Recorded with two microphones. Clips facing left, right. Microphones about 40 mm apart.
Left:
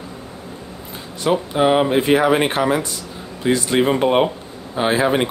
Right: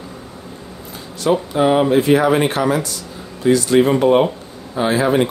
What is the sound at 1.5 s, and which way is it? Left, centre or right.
Speech, centre.